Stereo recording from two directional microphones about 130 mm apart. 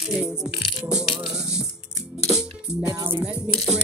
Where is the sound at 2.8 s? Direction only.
25° right (ahead or behind).